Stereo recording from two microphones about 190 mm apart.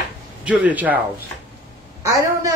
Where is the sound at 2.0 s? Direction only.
15° right (ahead or behind).